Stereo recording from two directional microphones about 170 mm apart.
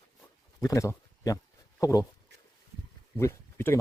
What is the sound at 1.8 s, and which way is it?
Speech, 20° left (ahead or behind).